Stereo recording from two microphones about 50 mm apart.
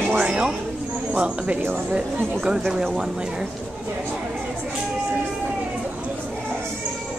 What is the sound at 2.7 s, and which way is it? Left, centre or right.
Speech, centre.